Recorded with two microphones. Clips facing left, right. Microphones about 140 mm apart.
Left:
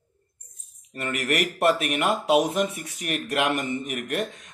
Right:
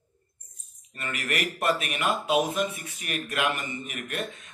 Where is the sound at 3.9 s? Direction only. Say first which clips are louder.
Left 6 dB; 65° left (ahead or behind).